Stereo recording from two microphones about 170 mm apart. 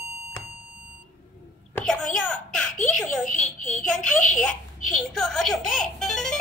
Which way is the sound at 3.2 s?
50° left (ahead or behind).